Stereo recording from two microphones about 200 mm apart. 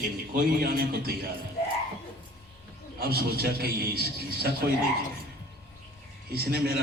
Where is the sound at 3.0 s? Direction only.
50° right (ahead or behind).